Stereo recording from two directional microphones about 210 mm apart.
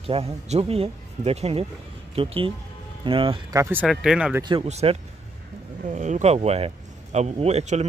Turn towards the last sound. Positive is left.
turn(degrees=-30)  # may be behind; listen again after turning